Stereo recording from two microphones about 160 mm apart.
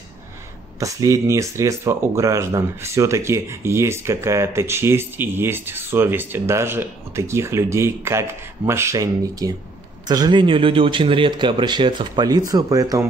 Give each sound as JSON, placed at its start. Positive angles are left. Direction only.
{"t": 0.7, "sound": "speech", "side_deg": -20}